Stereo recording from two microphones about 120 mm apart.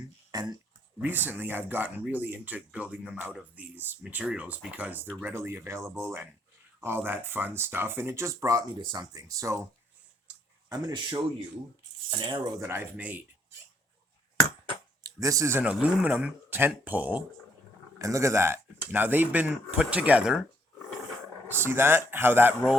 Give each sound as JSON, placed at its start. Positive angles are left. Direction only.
{"t": 0.3, "sound": "a sound", "side_deg": -35}
{"t": 0.9, "sound": "speech", "side_deg": -15}
{"t": 10.7, "sound": "speech", "side_deg": -30}
{"t": 12.1, "sound": "speech", "side_deg": -45}
{"t": 12.5, "sound": "speech", "side_deg": -20}
{"t": 15.0, "sound": "speech", "side_deg": -30}
{"t": 15.6, "sound": "speech", "side_deg": -10}
{"t": 18.0, "sound": "speech", "side_deg": -25}
{"t": 21.5, "sound": "speech", "side_deg": -20}